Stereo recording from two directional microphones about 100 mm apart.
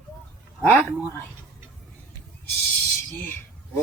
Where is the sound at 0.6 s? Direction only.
15° left (ahead or behind).